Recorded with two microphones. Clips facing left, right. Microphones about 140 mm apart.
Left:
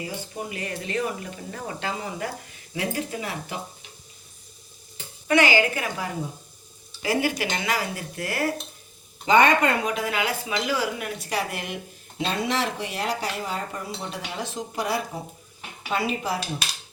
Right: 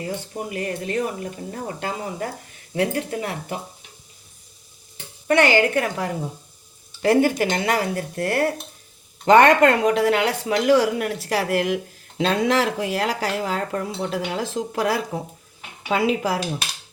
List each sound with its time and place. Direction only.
0.5 s speech: 50° right (ahead or behind)
1.5 s speech: 35° right (ahead or behind)
2.7 s speech: 55° right (ahead or behind)
5.3 s speech: 60° right (ahead or behind)
7.2 s speech: 45° right (ahead or behind)
9.2 s speech: 75° right (ahead or behind); by 16.4 s 90° right